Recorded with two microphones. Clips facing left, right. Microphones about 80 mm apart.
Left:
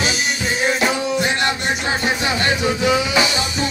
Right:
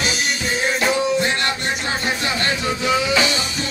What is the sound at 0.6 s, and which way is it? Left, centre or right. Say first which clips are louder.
Music: even; centre.